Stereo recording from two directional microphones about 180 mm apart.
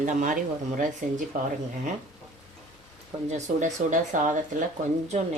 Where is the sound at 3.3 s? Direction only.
40° right (ahead or behind).